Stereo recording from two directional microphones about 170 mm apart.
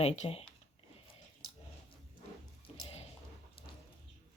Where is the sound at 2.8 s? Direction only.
35° left (ahead or behind).